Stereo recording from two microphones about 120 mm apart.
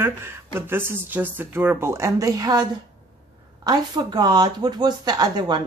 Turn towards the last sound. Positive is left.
turn(degrees=-35)  # may be behind; listen again after turning